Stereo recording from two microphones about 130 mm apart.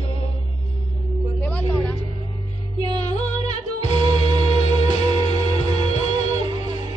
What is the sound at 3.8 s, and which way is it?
Music, 40° right (ahead or behind).